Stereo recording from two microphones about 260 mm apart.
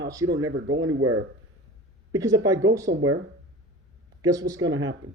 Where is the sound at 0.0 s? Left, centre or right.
Centre.